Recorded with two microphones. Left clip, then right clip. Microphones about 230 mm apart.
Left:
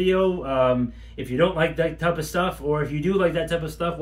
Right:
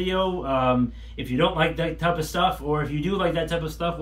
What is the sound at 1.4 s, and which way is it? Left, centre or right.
Speech, left.